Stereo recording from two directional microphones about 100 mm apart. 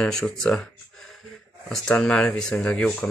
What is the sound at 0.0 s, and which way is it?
Speech, 5° left (ahead or behind).